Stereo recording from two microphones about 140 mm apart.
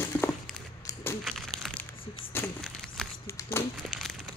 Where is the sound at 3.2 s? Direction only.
20° left (ahead or behind).